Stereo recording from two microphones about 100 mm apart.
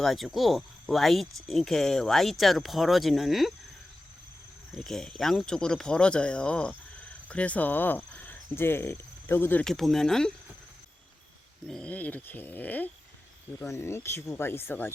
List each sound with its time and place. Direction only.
0.0 s speech: centre (ahead or behind)
4.7 s speech: 5° left (ahead or behind); by 9.6 s 20° left (ahead or behind)
9.6 s speech: centre (ahead or behind)
11.7 s speech: 10° left (ahead or behind)
13.7 s speech: 30° left (ahead or behind)